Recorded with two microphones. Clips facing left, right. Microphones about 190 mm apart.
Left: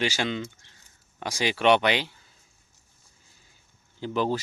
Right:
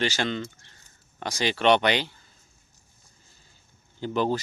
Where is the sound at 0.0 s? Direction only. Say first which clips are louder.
Even; 10° left (ahead or behind).